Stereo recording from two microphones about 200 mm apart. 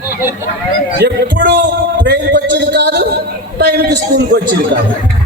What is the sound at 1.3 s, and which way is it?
A man's voice, 60° right (ahead or behind).